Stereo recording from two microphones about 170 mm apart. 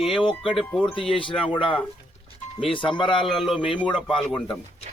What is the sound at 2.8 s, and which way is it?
Speech, 30° left (ahead or behind).